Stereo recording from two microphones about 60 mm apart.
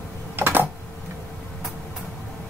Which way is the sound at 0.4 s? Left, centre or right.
Right.